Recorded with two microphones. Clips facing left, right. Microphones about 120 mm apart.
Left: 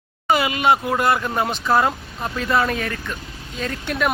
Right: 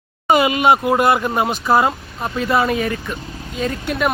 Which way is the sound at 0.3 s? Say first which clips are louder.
Right 4 dB; 20° right (ahead or behind).